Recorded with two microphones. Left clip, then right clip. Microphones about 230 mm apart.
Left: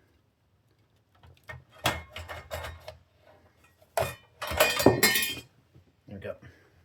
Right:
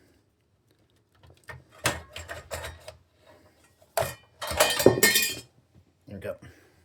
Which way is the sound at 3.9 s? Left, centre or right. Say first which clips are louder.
Right 1 dB; centre.